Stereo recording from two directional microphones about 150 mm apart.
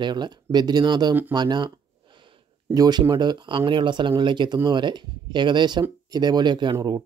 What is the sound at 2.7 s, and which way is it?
Speech, 25° right (ahead or behind).